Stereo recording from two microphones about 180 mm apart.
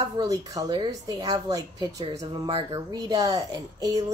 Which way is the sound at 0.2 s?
20° right (ahead or behind).